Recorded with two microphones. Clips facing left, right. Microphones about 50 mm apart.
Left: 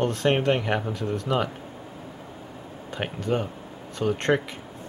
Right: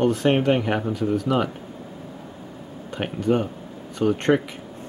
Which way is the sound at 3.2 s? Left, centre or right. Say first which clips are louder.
Right 6 dB; centre.